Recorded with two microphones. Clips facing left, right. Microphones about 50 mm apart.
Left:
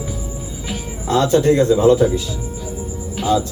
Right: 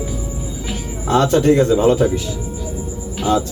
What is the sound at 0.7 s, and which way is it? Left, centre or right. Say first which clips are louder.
Music: left 2 dB; centre.